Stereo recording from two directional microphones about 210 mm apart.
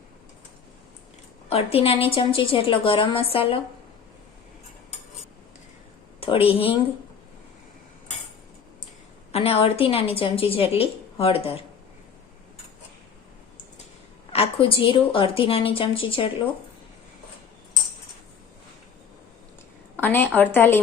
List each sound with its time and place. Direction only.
1.5 s a woman's voice: 30° left (ahead or behind)
6.1 s a woman's voice: 25° left (ahead or behind)
9.3 s a woman's voice: 30° left (ahead or behind)
14.3 s a woman's voice: 25° left (ahead or behind)
20.0 s a woman's voice: 10° left (ahead or behind)